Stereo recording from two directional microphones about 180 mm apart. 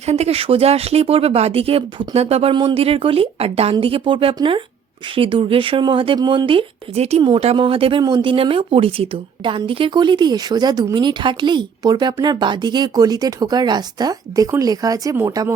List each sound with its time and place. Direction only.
0.0 s speech: 35° right (ahead or behind); by 15.5 s 15° right (ahead or behind)